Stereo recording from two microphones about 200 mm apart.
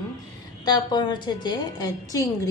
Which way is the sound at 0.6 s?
20° left (ahead or behind).